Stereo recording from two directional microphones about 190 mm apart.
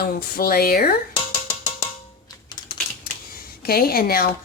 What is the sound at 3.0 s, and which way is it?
Typewriter, 50° left (ahead or behind).